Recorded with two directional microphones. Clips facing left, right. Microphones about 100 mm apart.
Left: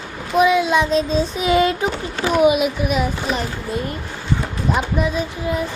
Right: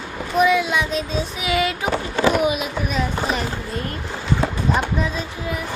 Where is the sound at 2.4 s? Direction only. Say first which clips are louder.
Left 6 dB; 20° left (ahead or behind).